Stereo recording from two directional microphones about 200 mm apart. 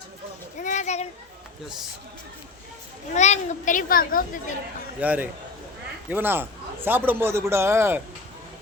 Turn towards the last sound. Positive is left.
turn(degrees=-15)  # may be behind; listen again after turning